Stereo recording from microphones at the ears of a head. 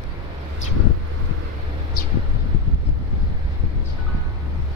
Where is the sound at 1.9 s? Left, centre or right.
Left.